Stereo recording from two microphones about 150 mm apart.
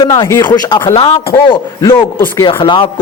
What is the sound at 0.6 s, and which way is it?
A man's voice, 30° left (ahead or behind).